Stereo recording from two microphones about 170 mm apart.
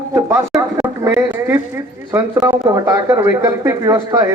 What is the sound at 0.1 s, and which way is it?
Speech, 15° right (ahead or behind).